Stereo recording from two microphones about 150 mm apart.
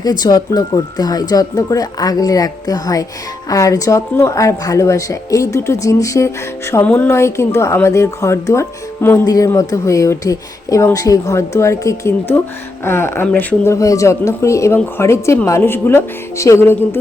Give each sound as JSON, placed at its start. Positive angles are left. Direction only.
{"t": 0.0, "sound": "speech", "side_deg": 25}
{"t": 13.7, "sound": "speech", "side_deg": 20}